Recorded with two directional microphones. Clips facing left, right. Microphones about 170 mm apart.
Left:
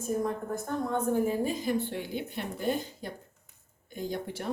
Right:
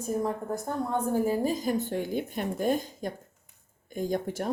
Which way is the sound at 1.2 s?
40° right (ahead or behind).